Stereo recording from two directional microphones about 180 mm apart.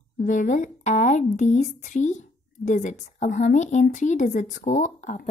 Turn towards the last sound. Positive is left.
turn(degrees=45)  # may be behind; listen again after turning